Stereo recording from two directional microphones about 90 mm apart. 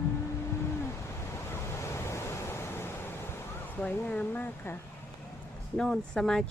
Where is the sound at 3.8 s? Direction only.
15° left (ahead or behind).